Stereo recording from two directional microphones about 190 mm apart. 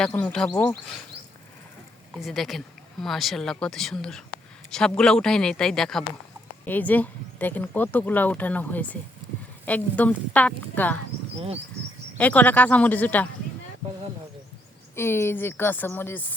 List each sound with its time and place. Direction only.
0.2 s speech: 5° left (ahead or behind)
2.1 s speech: centre (ahead or behind)
11.3 s speech: 30° right (ahead or behind)
12.1 s speech: 10° left (ahead or behind)
14.9 s speech: 15° left (ahead or behind)